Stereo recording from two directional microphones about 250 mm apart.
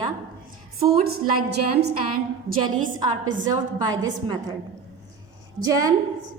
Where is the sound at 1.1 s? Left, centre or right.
Right.